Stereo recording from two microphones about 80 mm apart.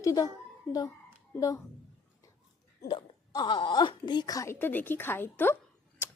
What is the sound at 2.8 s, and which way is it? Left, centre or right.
Speech, left.